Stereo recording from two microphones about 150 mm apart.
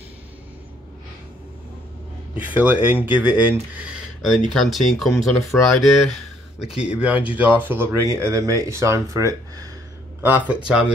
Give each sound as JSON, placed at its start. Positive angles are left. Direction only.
{"t": 2.3, "sound": "speech", "side_deg": -10}
{"t": 10.2, "sound": "speech", "side_deg": -10}